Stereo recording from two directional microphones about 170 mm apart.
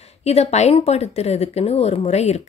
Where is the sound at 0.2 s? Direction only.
40° left (ahead or behind).